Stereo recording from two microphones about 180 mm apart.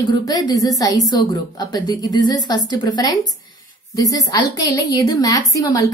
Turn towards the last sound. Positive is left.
turn(degrees=20)  # may be behind; listen again after turning